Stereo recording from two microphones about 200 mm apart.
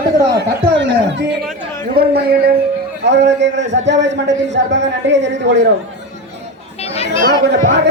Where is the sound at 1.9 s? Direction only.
50° right (ahead or behind).